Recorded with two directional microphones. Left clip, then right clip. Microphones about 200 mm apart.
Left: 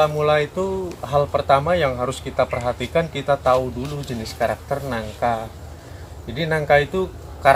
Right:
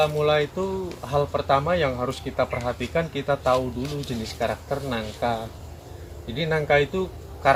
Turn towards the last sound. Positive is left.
turn(degrees=15)  # may be behind; listen again after turning